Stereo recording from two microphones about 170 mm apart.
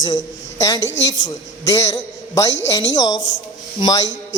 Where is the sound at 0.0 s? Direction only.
20° left (ahead or behind).